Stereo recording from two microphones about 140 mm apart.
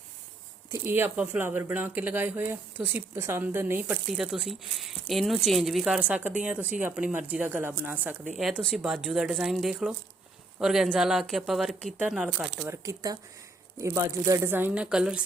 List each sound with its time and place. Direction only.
0.7 s speech: 15° right (ahead or behind)
12.6 s speech: 20° right (ahead or behind); by 15.2 s 5° right (ahead or behind)